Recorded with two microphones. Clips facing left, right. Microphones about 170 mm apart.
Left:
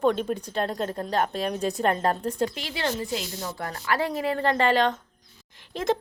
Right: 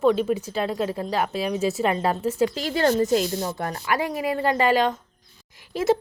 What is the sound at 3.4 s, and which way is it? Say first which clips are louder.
A woman's voice: right 4 dB; 20° right (ahead or behind).